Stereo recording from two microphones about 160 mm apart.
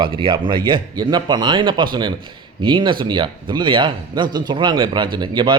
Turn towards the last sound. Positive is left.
turn(degrees=-25)  # may be behind; listen again after turning